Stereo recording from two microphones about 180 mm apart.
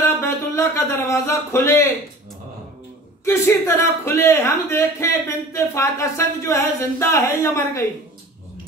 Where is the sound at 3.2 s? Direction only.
15° left (ahead or behind).